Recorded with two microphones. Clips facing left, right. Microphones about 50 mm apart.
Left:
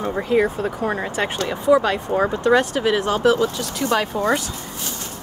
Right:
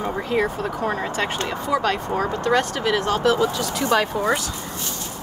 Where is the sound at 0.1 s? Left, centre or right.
Centre.